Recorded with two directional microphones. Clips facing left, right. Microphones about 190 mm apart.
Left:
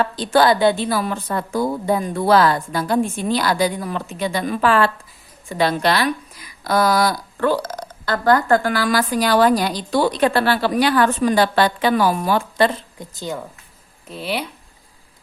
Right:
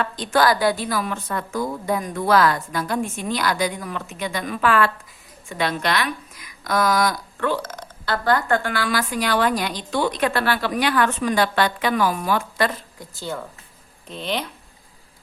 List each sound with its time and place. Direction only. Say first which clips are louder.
0.0 s speech: left 4 dB; 30° left (ahead or behind); by 14.5 s 10° left (ahead or behind)